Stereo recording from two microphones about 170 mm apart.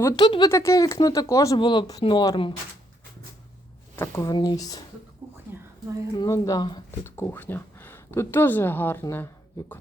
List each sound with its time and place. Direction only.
0.0 s speech: 25° left (ahead or behind)
3.9 s speech: 15° left (ahead or behind)
5.5 s a sound: 10° right (ahead or behind)
6.1 s speech: 20° left (ahead or behind)
7.2 s speech: 10° left (ahead or behind)